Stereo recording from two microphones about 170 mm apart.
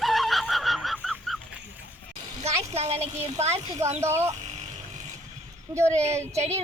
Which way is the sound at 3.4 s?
40° right (ahead or behind).